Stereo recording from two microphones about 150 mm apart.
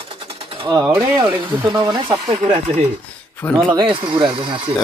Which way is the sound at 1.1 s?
30° right (ahead or behind).